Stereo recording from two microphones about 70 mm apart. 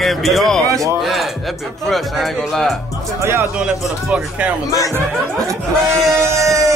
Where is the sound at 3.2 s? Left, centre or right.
Right.